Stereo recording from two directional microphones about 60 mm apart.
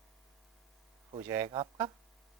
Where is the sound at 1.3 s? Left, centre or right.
Right.